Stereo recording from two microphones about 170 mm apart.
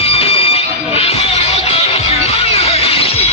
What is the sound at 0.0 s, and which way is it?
Music, 35° left (ahead or behind).